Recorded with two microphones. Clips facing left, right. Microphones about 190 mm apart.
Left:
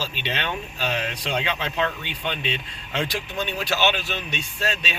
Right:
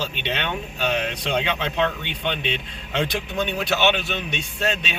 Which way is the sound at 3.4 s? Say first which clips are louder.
Right 2 dB; 65° right (ahead or behind).